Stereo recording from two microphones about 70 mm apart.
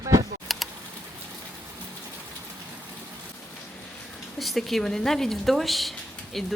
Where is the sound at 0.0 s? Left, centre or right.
Right.